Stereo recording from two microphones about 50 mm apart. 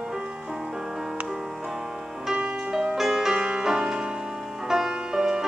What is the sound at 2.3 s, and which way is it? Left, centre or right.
Music, right.